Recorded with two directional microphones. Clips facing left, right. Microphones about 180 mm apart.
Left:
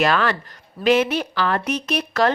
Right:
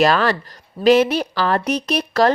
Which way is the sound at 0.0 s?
35° right (ahead or behind).